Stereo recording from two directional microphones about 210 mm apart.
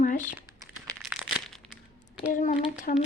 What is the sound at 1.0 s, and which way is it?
Crumpling, centre (ahead or behind).